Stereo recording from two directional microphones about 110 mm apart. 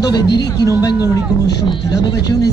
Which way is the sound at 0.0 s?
40° left (ahead or behind).